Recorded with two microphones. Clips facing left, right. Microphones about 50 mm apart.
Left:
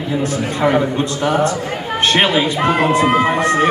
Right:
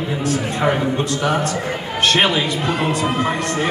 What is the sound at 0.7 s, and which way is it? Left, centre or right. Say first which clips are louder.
Speech: left 3 dB; left.